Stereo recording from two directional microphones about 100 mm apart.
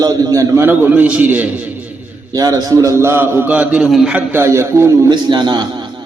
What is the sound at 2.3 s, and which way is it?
A man's voice, 35° right (ahead or behind).